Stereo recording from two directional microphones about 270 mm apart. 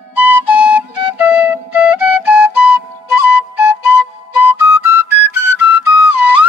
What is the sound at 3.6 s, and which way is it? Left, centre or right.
Flute, centre.